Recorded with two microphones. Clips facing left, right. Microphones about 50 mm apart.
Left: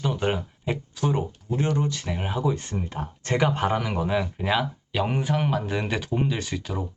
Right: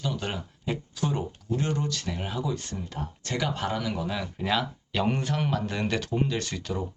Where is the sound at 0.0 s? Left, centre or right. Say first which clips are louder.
Left 6 dB; left.